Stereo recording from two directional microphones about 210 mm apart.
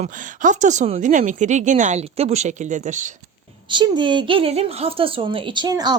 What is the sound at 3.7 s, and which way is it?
A woman's voice, 20° right (ahead or behind).